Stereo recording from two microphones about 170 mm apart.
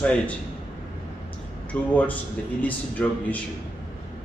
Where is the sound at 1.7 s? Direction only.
5° left (ahead or behind).